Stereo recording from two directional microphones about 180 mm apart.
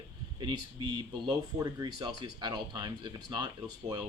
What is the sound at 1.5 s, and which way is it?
Speech, 20° right (ahead or behind).